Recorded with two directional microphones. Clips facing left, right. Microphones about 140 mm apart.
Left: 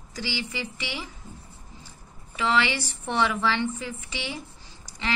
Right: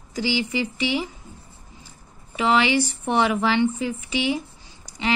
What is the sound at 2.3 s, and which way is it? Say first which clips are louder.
Speech: right 5 dB; 20° right (ahead or behind).